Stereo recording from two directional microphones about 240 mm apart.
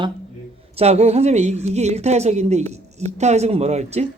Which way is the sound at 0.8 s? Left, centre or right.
Right.